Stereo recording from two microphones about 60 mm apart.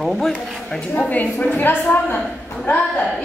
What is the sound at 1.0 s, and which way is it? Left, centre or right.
Speech, left.